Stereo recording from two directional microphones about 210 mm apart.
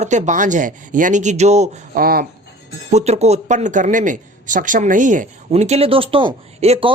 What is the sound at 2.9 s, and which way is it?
Speech, 30° right (ahead or behind).